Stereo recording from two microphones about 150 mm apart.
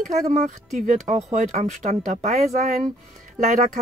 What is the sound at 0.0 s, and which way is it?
Speech, 50° right (ahead or behind).